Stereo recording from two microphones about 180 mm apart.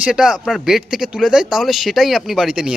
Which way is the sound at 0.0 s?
5° right (ahead or behind).